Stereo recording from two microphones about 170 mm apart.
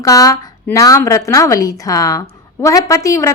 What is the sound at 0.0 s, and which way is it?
A woman's voice, 20° left (ahead or behind).